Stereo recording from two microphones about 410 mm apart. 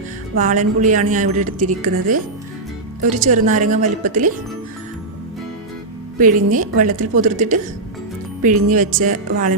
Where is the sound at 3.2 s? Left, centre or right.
Centre.